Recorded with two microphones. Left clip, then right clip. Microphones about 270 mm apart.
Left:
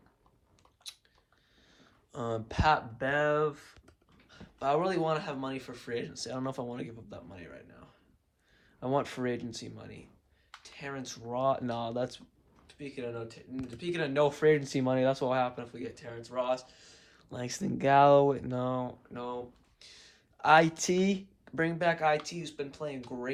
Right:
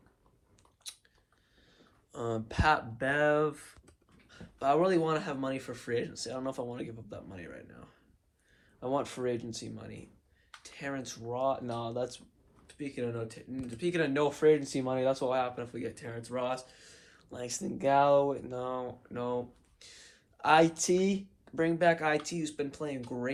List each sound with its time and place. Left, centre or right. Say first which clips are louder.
0.9 s chewing: left 1 dB; left
1.8 s a sound: even; left
3.0 s speech: right 1 dB; centre
4.3 s speech: right 1 dB; left
8.8 s speech: left 1 dB; left
12.6 s speech: right 3 dB; centre